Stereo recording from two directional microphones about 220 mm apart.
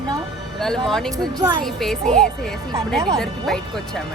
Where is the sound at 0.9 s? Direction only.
Centre (ahead or behind).